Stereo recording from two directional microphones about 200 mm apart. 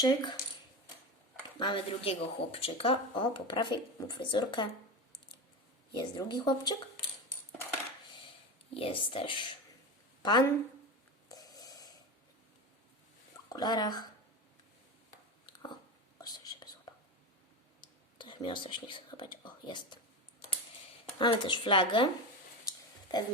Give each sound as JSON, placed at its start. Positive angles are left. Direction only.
{"t": 0.0, "sound": "speech", "side_deg": 20}
{"t": 1.5, "sound": "speech", "side_deg": 25}
{"t": 5.9, "sound": "speech", "side_deg": 25}
{"t": 8.7, "sound": "speech", "side_deg": 25}
{"t": 11.3, "sound": "a sound", "side_deg": 20}
{"t": 13.5, "sound": "speech", "side_deg": 20}
{"t": 15.4, "sound": "a sound", "side_deg": 20}
{"t": 16.2, "sound": "whispering", "side_deg": 20}
{"t": 17.7, "sound": "whispering", "side_deg": 20}
{"t": 21.2, "sound": "speech", "side_deg": 25}
{"t": 23.1, "sound": "a sound", "side_deg": 20}